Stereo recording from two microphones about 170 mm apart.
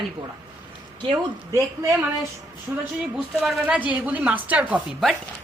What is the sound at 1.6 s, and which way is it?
A woman's voice, 20° right (ahead or behind).